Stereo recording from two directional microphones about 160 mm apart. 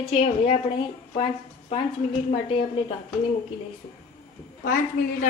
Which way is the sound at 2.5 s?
35° left (ahead or behind).